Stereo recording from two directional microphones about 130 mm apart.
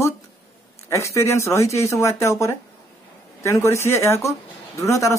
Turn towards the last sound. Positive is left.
turn(degrees=25)  # may be behind; listen again after turning